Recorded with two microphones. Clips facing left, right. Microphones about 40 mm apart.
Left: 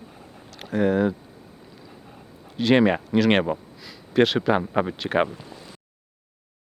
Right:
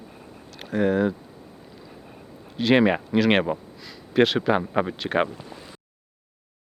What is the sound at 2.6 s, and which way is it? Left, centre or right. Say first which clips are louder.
Speech: even; centre.